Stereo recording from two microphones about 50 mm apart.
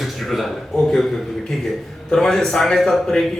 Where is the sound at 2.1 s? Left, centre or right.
Centre.